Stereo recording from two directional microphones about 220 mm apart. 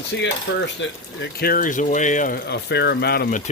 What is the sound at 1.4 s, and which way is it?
Speech, 40° left (ahead or behind).